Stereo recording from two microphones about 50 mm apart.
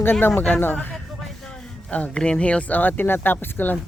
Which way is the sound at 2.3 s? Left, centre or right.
Left.